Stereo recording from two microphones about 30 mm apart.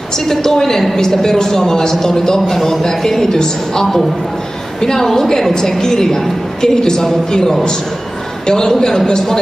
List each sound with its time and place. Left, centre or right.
0.3 s a woman's voice: centre
6.6 s a man's voice: left
8.5 s a man's voice: left